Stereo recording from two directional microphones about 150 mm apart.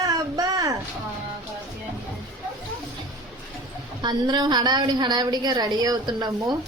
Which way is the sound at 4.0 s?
30° right (ahead or behind).